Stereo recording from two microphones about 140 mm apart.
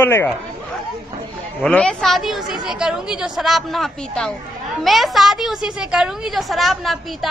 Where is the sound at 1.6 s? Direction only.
10° left (ahead or behind).